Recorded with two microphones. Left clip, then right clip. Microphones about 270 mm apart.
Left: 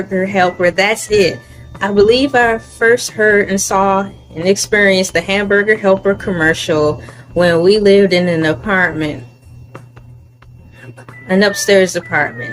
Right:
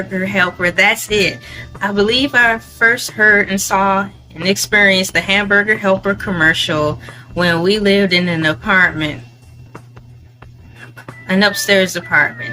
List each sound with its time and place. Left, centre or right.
0.1 s a woman's voice: centre
11.3 s a woman's voice: centre